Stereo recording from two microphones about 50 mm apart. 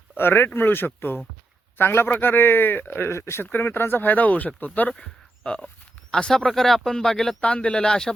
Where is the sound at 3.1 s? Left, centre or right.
Left.